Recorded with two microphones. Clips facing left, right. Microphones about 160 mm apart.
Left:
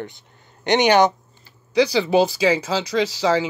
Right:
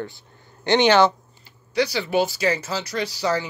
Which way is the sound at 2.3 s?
90° left.